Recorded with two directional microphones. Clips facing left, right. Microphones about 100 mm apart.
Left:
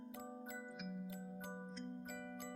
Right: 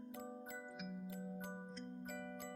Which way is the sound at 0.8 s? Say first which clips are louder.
Left 1 dB; centre (ahead or behind).